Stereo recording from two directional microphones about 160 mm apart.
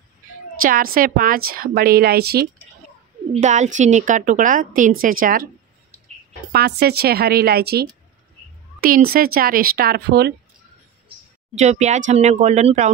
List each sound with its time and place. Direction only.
0.6 s a woman's voice: 60° right (ahead or behind); by 2.4 s 75° right (ahead or behind)
3.3 s a woman's voice: 45° right (ahead or behind)
6.5 s speech: 85° right
8.8 s speech: 65° right (ahead or behind); by 10.3 s 85° right
11.5 s a woman's voice: 45° right (ahead or behind)